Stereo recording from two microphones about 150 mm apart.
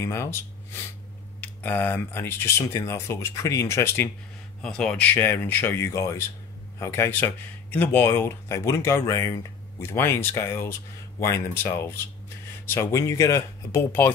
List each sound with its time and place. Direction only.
0.0 s speech: 15° left (ahead or behind)
4.6 s speech: 5° left (ahead or behind)